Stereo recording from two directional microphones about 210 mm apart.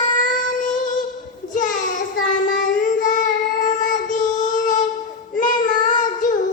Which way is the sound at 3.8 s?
35° left (ahead or behind).